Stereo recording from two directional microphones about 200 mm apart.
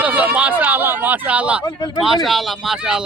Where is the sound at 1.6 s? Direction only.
20° left (ahead or behind).